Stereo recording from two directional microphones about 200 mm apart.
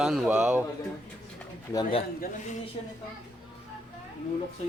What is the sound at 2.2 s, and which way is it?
Speech, 40° left (ahead or behind).